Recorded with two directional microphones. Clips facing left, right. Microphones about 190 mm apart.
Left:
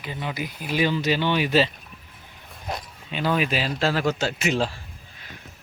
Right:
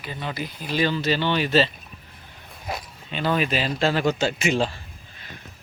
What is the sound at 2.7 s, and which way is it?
Speech, 5° right (ahead or behind).